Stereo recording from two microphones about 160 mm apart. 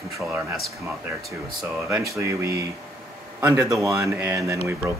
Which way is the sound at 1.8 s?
15° right (ahead or behind).